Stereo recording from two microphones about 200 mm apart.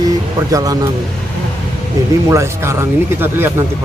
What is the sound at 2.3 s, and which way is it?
Speech, 15° right (ahead or behind).